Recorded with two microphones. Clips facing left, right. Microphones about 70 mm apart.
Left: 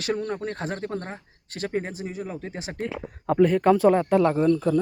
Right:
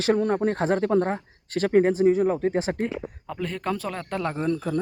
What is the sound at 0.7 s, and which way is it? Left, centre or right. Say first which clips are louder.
Speech: right 9 dB; right.